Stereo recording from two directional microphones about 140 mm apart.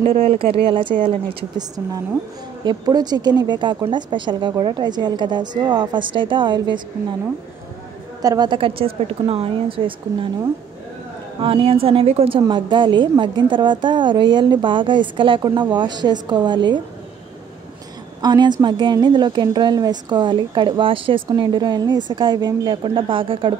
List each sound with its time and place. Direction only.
0.0 s a woman's voice: 45° right (ahead or behind)
2.6 s a woman's voice: 30° right (ahead or behind)
8.2 s a woman's voice: 30° right (ahead or behind)
11.4 s a woman's voice: 40° right (ahead or behind)
18.2 s a woman's voice: 30° right (ahead or behind)